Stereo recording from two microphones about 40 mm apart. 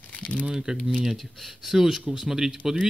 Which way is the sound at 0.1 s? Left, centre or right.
Left.